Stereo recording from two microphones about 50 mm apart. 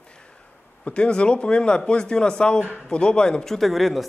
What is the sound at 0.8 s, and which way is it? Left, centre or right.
Speech, left.